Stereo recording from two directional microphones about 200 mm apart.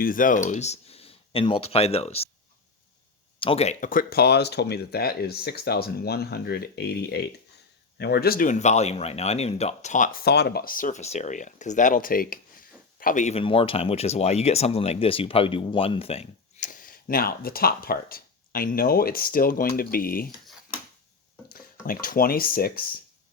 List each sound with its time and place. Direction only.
0.0 s speech: 45° left (ahead or behind)
3.4 s speech: 30° left (ahead or behind); by 20.3 s 45° left (ahead or behind)
21.8 s speech: 45° left (ahead or behind)